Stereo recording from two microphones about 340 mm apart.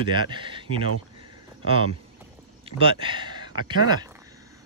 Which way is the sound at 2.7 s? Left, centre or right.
Centre.